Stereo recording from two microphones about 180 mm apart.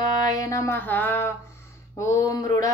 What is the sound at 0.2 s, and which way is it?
Music, 20° left (ahead or behind).